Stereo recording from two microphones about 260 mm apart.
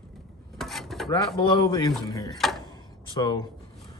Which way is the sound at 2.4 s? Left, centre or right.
Centre.